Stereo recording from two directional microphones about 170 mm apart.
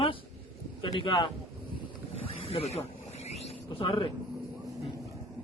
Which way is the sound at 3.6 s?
30° left (ahead or behind).